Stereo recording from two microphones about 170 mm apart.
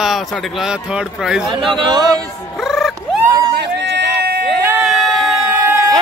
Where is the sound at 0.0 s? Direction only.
Centre (ahead or behind).